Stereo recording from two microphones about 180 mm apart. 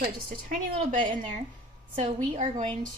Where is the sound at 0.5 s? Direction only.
45° right (ahead or behind).